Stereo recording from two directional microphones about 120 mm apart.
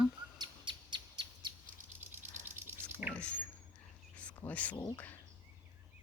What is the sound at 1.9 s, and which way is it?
Rattle, 20° right (ahead or behind).